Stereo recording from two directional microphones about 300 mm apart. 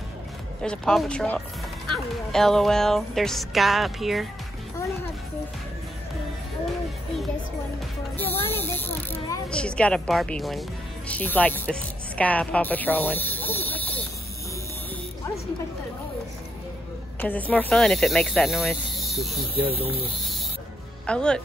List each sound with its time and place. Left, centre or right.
0.6 s speech: centre
8.2 s music: centre
8.9 s speech: centre
17.2 s speech: centre
19.6 s speech: centre
21.1 s speech: centre